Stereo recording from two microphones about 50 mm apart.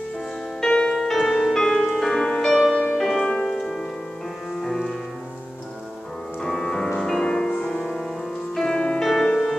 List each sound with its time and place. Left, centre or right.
0.6 s music: centre
2.4 s music: centre
3.3 s music: centre
3.5 s music: centre
6.4 s music: centre